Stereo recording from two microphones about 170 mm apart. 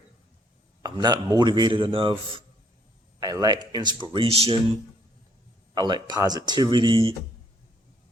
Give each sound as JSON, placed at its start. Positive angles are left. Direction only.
{"t": 0.8, "sound": "a man's voice", "side_deg": -25}
{"t": 5.7, "sound": "a man's voice", "side_deg": -25}